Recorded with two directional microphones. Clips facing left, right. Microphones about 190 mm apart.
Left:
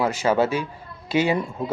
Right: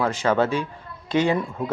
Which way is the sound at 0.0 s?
10° left (ahead or behind).